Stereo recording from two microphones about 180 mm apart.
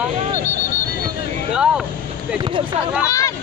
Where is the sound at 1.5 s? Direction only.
5° right (ahead or behind).